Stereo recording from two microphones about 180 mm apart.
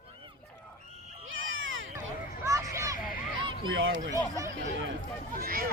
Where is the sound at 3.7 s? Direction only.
90° right.